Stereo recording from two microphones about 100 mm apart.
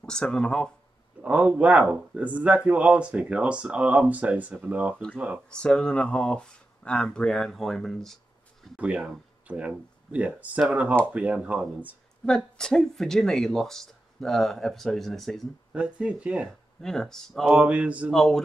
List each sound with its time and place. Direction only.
0.0 s speech: 5° left (ahead or behind)
1.2 s speech: 15° right (ahead or behind)
5.5 s speech: 10° left (ahead or behind)
8.7 s speech: 10° right (ahead or behind)
12.3 s speech: 5° left (ahead or behind)
15.7 s speech: 10° right (ahead or behind)
16.8 s speech: 5° left (ahead or behind)
17.5 s speech: 10° right (ahead or behind)
18.1 s speech: 5° left (ahead or behind)